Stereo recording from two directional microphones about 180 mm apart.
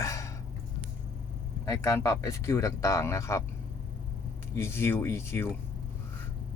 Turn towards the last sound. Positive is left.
turn(degrees=15)  # may be behind; listen again after turning